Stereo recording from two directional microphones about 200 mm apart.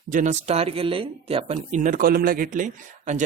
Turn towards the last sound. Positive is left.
turn(degrees=-40)  # may be behind; listen again after turning